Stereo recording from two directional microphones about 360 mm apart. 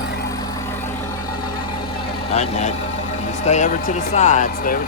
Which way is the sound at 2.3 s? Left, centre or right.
Centre.